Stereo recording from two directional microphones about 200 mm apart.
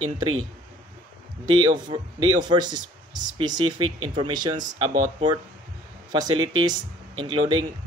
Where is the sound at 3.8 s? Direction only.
90° right.